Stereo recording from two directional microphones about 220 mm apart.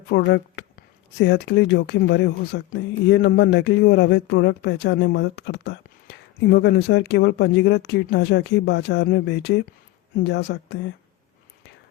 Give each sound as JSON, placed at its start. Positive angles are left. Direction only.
{"t": 0.1, "sound": "speech", "side_deg": 55}